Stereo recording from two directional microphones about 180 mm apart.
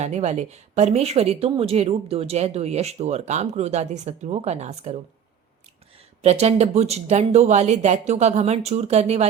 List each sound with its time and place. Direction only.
0.0 s speech: 40° right (ahead or behind)
6.2 s speech: 35° right (ahead or behind)